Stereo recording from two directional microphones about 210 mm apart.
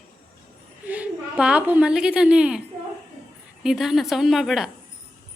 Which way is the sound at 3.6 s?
Centre (ahead or behind).